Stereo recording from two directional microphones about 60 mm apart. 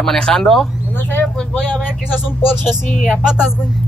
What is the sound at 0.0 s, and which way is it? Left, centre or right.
Speech, centre.